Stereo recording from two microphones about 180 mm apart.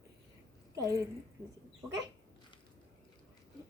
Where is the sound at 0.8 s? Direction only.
20° right (ahead or behind).